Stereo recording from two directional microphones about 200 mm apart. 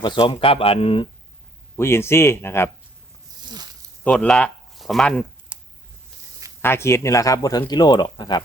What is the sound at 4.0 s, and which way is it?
Speech, 5° left (ahead or behind).